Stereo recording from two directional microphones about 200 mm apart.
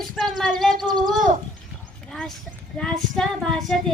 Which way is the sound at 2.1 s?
Centre (ahead or behind).